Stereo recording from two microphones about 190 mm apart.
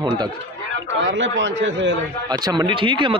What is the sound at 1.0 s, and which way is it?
Speech, 75° right (ahead or behind).